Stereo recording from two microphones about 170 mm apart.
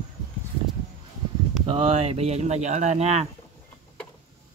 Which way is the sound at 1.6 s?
35° right (ahead or behind).